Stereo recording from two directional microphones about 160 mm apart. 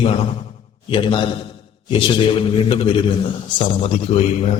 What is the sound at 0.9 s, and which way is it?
A man's voice, 30° left (ahead or behind).